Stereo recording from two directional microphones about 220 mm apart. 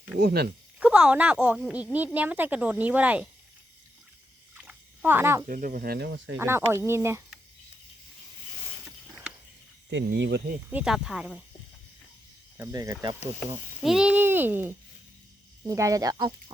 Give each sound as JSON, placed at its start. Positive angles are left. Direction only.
{"t": 0.2, "sound": "speech", "side_deg": -45}
{"t": 0.8, "sound": "speech", "side_deg": -5}
{"t": 4.6, "sound": "a sound", "side_deg": -10}
{"t": 5.5, "sound": "speech", "side_deg": -40}
{"t": 6.3, "sound": "speech", "side_deg": -10}
{"t": 9.9, "sound": "speech", "side_deg": -50}
{"t": 10.7, "sound": "speech", "side_deg": -5}
{"t": 12.5, "sound": "speech", "side_deg": -15}
{"t": 13.8, "sound": "speech", "side_deg": -5}